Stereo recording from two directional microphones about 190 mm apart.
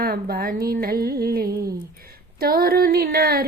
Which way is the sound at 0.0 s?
50° right (ahead or behind).